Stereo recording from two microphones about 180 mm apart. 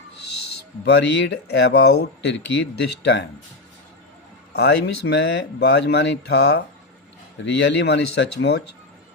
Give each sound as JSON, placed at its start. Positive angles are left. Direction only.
{"t": 0.9, "sound": "speech", "side_deg": 70}
{"t": 4.5, "sound": "speech", "side_deg": 70}